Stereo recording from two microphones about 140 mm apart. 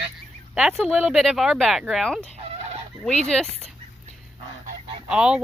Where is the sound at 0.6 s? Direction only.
Centre (ahead or behind).